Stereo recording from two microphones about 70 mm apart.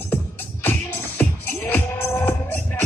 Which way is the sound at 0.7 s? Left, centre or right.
Left.